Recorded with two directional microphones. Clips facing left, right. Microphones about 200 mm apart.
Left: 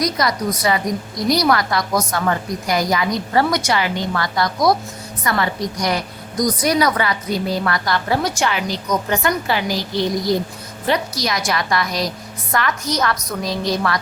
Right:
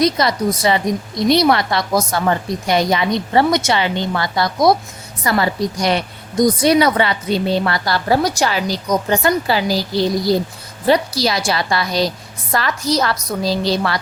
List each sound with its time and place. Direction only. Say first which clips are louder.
0.0 s a woman's voice: right 4 dB; 25° right (ahead or behind)